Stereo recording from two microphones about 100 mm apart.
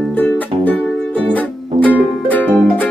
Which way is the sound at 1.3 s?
15° left (ahead or behind).